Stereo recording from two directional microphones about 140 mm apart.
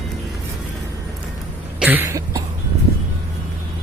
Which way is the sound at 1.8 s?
15° right (ahead or behind).